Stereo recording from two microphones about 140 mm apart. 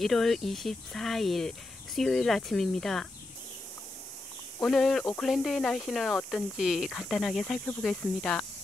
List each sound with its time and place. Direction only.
0.0 s speech: centre (ahead or behind)
4.6 s speech: centre (ahead or behind)